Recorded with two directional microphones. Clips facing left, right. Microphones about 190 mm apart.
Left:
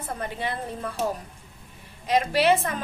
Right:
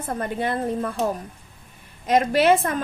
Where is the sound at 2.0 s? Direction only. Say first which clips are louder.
Right 3 dB; 50° right (ahead or behind).